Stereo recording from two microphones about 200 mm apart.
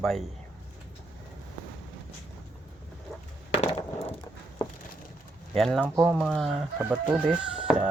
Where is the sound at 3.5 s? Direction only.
25° left (ahead or behind).